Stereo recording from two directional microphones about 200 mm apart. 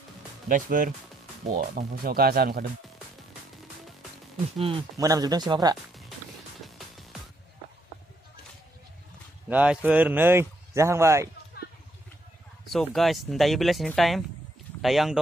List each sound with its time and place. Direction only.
0.5 s speech: 40° right (ahead or behind)
4.6 s speech: 25° right (ahead or behind)
6.6 s music: centre (ahead or behind)
9.5 s speech: 5° right (ahead or behind)
12.6 s speech: centre (ahead or behind)